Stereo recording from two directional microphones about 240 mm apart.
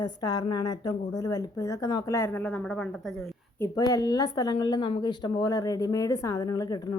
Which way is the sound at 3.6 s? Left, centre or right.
Centre.